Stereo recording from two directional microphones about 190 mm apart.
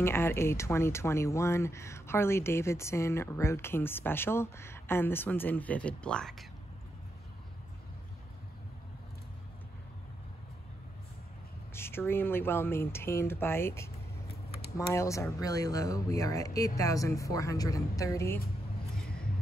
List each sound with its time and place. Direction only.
0.0 s speech: 10° left (ahead or behind)
11.7 s speech: 10° left (ahead or behind)
19.0 s a sound: 50° left (ahead or behind)